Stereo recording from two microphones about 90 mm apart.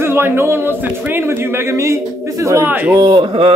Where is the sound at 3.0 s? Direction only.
70° right (ahead or behind).